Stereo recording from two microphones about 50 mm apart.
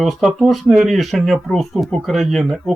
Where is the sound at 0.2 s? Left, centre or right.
Centre.